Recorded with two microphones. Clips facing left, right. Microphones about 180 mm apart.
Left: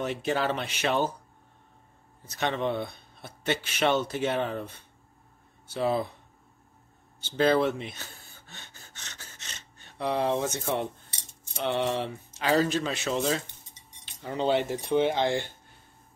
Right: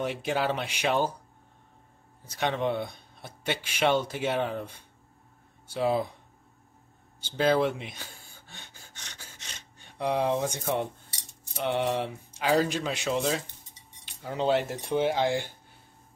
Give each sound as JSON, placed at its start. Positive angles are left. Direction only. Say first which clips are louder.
{"t": 0.0, "sound": "speech", "louder": "even", "side_deg": -10}
{"t": 2.2, "sound": "speech", "louder": "even", "side_deg": -10}
{"t": 7.2, "sound": "gasp", "louder": "left 1 dB", "side_deg": -10}
{"t": 11.6, "sound": "speech", "louder": "even", "side_deg": -10}